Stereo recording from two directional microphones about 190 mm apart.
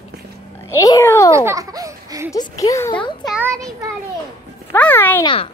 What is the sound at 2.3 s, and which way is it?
Speech, 15° left (ahead or behind).